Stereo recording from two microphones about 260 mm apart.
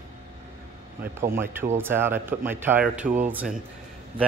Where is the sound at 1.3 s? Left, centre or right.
Centre.